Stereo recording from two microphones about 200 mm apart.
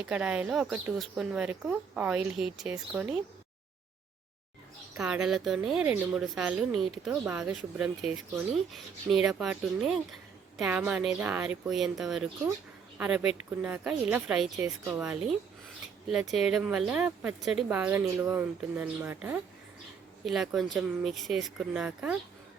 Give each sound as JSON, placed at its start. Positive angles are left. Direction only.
{"t": 0.0, "sound": "speech", "side_deg": -5}
{"t": 4.9, "sound": "speech", "side_deg": -5}